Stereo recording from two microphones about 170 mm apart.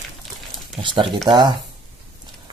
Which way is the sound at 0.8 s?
30° right (ahead or behind).